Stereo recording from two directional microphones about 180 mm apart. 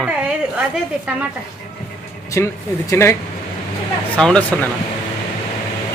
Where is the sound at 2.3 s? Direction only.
15° left (ahead or behind).